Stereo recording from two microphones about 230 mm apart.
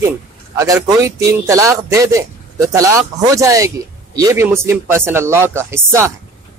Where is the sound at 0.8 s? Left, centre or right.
Centre.